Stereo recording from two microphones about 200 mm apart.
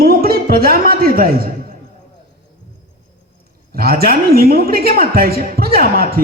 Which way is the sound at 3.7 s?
50° right (ahead or behind).